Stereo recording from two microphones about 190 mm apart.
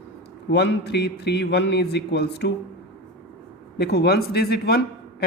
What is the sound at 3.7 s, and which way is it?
A man's voice, 60° left (ahead or behind).